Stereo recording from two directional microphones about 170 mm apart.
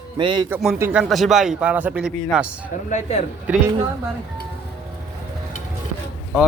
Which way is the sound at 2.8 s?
45° left (ahead or behind).